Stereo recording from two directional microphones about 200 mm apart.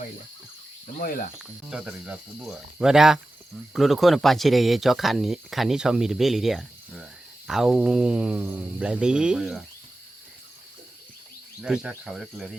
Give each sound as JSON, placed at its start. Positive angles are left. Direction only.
{"t": 0.9, "sound": "cricket", "side_deg": 45}
{"t": 1.4, "sound": "speech", "side_deg": -5}
{"t": 11.6, "sound": "speech", "side_deg": -5}